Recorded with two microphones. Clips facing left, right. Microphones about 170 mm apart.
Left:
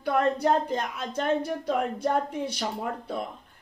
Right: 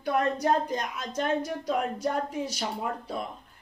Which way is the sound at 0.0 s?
60° left (ahead or behind).